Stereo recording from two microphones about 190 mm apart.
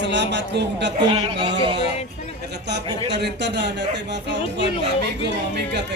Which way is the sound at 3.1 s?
65° right (ahead or behind).